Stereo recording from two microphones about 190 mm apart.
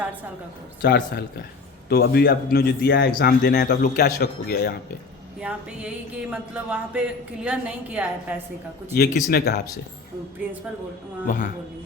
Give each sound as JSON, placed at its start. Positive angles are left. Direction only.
{"t": 0.8, "sound": "a man's voice", "side_deg": 60}
{"t": 5.4, "sound": "a sound", "side_deg": -5}
{"t": 9.0, "sound": "a man's voice", "side_deg": 55}
{"t": 11.3, "sound": "a man's voice", "side_deg": 40}